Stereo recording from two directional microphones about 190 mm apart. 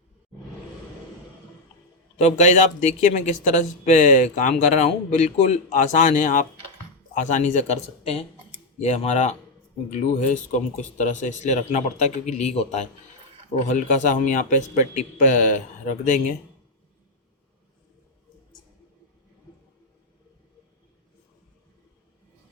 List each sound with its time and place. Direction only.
2.1 s speech: 40° left (ahead or behind)